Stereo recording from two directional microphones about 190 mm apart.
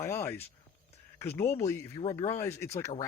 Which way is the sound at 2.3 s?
15° left (ahead or behind).